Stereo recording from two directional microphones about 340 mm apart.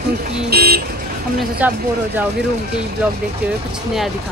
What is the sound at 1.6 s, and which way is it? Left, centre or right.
Speech, centre.